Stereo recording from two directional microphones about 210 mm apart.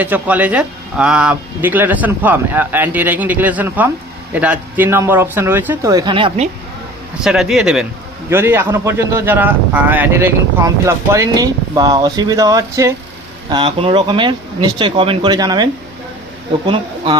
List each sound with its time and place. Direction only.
0.0 s speech: 5° right (ahead or behind); by 6.5 s 25° right (ahead or behind)
7.2 s a man's voice: centre (ahead or behind); by 17.2 s 25° right (ahead or behind)